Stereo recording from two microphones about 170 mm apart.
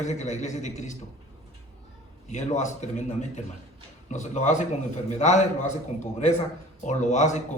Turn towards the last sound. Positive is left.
turn(degrees=45)  # may be behind; listen again after turning